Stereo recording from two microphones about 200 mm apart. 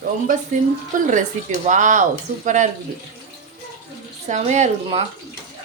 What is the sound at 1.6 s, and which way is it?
Speech, 40° right (ahead or behind).